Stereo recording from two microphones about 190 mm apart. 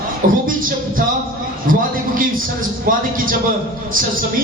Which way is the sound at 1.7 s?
45° right (ahead or behind).